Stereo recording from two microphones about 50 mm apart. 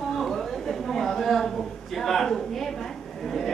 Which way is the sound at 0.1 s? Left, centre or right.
Centre.